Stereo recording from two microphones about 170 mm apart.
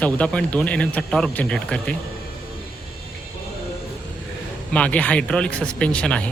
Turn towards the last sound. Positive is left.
turn(degrees=5)  # may be behind; listen again after turning